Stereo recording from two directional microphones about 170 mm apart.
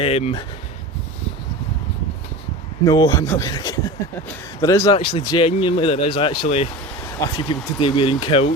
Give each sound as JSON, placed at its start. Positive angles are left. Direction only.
{"t": 0.0, "sound": "speech", "side_deg": 35}
{"t": 2.8, "sound": "speech", "side_deg": 20}